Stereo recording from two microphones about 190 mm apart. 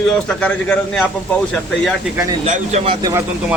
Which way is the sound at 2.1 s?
15° right (ahead or behind).